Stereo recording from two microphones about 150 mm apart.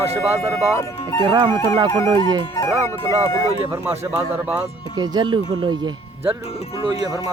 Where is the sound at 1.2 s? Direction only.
30° right (ahead or behind).